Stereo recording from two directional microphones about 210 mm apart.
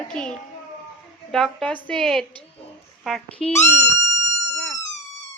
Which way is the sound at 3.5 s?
30° left (ahead or behind).